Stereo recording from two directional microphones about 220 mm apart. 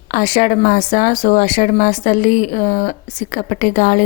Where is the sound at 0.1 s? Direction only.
35° left (ahead or behind).